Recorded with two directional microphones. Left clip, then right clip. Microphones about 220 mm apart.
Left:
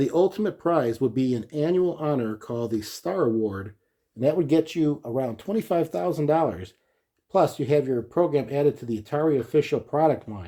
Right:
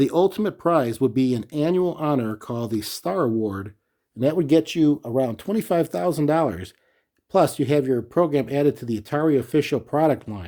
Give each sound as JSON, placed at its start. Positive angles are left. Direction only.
{"t": 0.0, "sound": "speech", "side_deg": -40}